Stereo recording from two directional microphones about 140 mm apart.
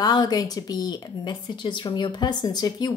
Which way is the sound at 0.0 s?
30° left (ahead or behind).